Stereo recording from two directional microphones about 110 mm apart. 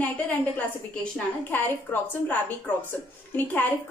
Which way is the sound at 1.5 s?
15° left (ahead or behind).